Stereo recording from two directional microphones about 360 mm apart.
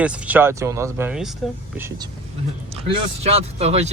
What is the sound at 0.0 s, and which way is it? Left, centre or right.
Speech, centre.